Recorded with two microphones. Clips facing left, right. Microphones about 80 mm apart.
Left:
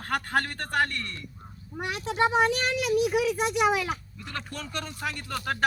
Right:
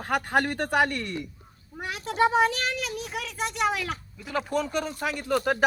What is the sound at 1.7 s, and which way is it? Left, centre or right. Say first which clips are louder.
A child's voice: left 2 dB; centre.